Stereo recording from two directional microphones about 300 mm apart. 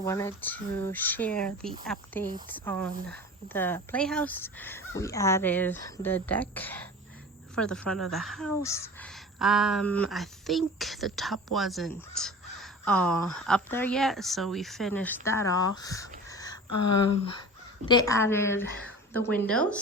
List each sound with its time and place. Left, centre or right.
0.0 s speech: centre
16.6 s speech: left
17.8 s speech: centre